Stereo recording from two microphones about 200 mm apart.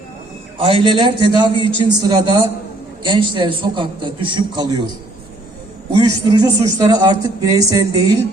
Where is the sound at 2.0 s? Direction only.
20° right (ahead or behind).